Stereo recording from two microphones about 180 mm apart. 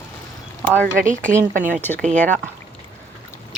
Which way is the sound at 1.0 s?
45° right (ahead or behind).